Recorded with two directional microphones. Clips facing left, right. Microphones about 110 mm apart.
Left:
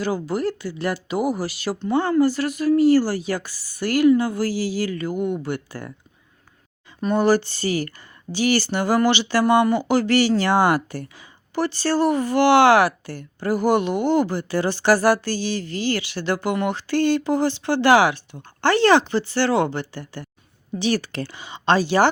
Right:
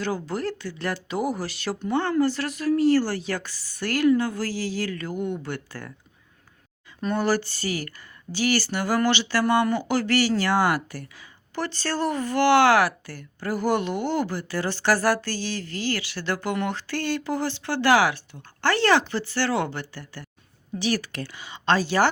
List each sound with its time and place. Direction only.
0.0 s a woman's voice: 10° left (ahead or behind)
7.0 s speech: 15° left (ahead or behind)
11.5 s speech: 10° left (ahead or behind)